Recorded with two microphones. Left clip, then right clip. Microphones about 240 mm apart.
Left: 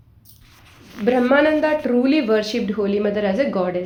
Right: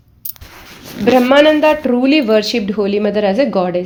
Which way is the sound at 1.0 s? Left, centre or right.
Right.